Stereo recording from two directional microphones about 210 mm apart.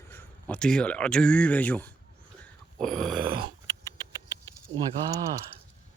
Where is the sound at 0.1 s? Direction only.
10° left (ahead or behind).